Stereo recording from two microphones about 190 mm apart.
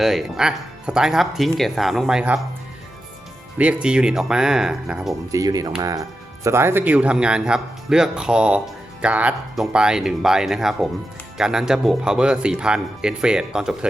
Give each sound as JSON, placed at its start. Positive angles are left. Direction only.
{"t": 0.0, "sound": "speech", "side_deg": 0}
{"t": 3.6, "sound": "speech", "side_deg": -5}
{"t": 5.3, "sound": "speech", "side_deg": -20}